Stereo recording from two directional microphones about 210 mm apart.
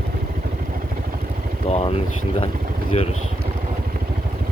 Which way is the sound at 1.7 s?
30° left (ahead or behind).